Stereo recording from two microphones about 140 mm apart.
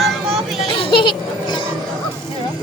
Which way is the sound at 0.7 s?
35° left (ahead or behind).